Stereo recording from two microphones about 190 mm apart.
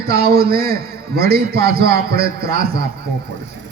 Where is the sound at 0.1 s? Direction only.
55° right (ahead or behind).